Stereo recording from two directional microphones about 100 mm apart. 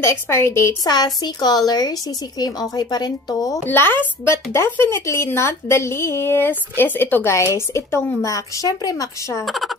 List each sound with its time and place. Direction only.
0.0 s speech: 25° left (ahead or behind)
0.8 s speech: 45° left (ahead or behind)
3.6 s speech: 20° left (ahead or behind)
9.4 s speech: centre (ahead or behind)